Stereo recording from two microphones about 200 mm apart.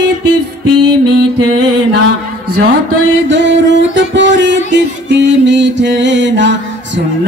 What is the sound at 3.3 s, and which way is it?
Music, 60° right (ahead or behind).